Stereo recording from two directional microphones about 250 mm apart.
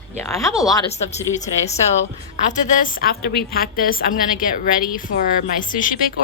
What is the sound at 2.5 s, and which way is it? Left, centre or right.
A woman's voice, left.